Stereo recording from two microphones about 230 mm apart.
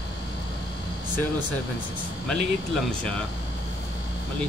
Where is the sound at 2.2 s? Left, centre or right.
Centre.